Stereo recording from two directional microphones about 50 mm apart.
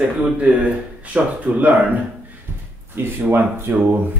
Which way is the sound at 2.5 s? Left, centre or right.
Right.